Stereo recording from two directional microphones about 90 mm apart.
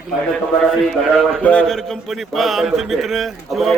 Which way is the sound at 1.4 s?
15° left (ahead or behind).